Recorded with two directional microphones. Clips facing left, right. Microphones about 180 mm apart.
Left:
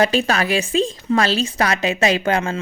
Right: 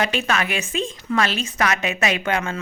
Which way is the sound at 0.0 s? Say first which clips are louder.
Left 5 dB; 35° left (ahead or behind).